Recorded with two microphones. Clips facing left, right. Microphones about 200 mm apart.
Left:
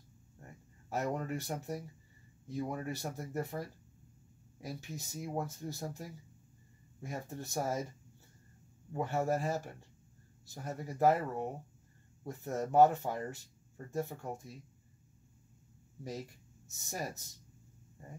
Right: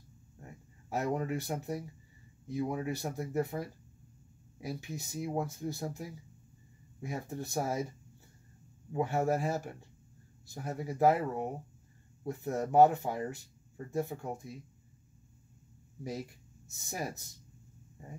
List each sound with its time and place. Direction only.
0.8 s speech: 10° right (ahead or behind)
8.9 s speech: 10° right (ahead or behind)
16.0 s speech: 10° right (ahead or behind)